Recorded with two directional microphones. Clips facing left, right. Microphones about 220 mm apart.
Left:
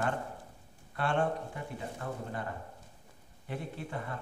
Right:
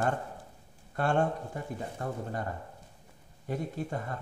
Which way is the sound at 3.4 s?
40° right (ahead or behind).